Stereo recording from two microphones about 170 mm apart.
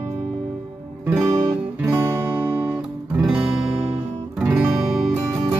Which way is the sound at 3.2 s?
5° right (ahead or behind).